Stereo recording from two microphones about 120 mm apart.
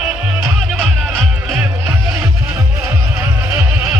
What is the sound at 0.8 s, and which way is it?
Music, centre (ahead or behind).